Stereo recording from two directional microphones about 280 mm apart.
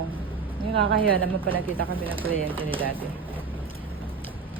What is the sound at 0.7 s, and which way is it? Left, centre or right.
Speech, right.